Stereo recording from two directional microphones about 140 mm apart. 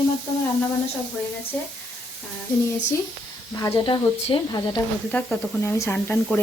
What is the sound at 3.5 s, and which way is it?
Speech, 30° left (ahead or behind).